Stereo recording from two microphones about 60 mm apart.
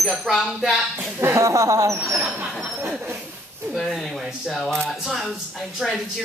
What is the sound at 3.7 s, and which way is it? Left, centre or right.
Speech, centre.